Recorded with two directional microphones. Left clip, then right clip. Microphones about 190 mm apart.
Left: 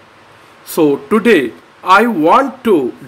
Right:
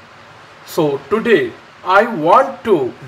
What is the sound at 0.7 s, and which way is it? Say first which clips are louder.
Speech: left 4 dB; 60° left (ahead or behind).